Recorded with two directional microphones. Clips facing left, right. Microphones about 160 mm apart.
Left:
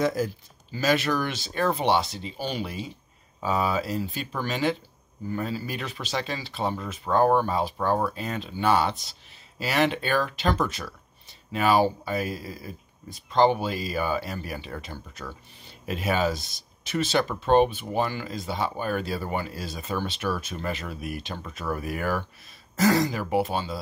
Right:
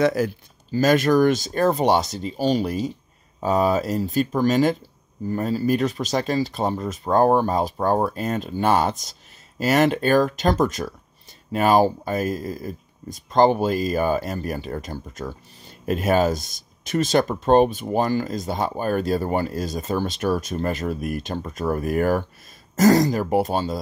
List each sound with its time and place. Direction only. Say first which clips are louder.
0.0 s speech: right 5 dB; 70° right (ahead or behind)
0.7 s speech: right 7 dB; 45° right (ahead or behind)